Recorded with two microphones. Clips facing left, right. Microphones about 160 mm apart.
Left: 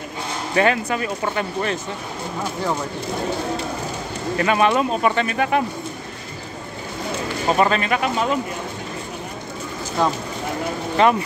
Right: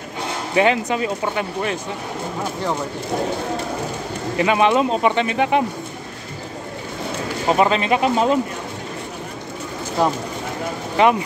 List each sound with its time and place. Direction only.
0.6 s speech: 20° right (ahead or behind)
4.4 s speech: 15° right (ahead or behind)
7.4 s speech: 15° right (ahead or behind)
10.0 s speech: 5° right (ahead or behind)